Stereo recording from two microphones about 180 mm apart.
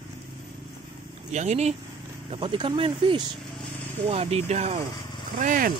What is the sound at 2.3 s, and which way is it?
Speech, 30° right (ahead or behind).